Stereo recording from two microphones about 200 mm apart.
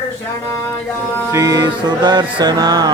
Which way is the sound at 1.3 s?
15° right (ahead or behind).